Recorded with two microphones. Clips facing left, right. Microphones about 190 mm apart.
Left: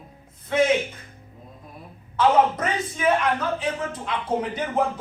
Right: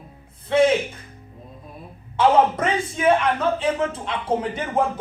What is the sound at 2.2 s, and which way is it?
Speech, 30° right (ahead or behind).